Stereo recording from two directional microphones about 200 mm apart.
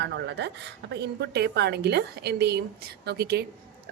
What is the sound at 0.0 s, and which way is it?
A woman's voice, 60° right (ahead or behind).